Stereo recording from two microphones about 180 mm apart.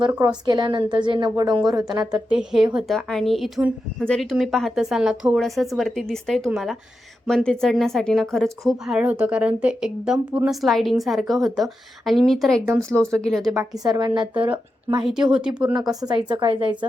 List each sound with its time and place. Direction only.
0.0 s a woman's voice: 20° right (ahead or behind)
2.0 s a woman's voice: 5° right (ahead or behind)
13.6 s a woman's voice: 20° right (ahead or behind)
15.0 s a woman's voice: 5° right (ahead or behind)
16.0 s a woman's voice: 25° right (ahead or behind)